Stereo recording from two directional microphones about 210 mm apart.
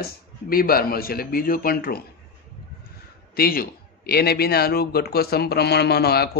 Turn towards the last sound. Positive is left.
turn(degrees=50)  # may be behind; listen again after turning